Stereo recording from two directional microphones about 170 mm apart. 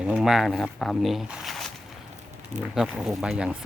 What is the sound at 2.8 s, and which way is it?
Speech, 5° right (ahead or behind).